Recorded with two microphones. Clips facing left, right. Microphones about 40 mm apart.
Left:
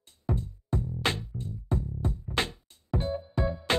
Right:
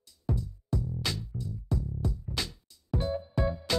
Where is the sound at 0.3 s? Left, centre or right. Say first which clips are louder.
Left 1 dB; left.